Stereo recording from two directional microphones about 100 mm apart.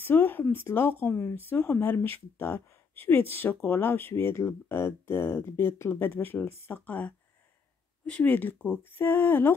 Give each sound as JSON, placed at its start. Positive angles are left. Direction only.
{"t": 0.0, "sound": "speech", "side_deg": 20}